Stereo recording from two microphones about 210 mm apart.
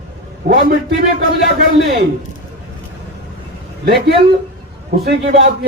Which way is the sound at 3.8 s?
50° right (ahead or behind).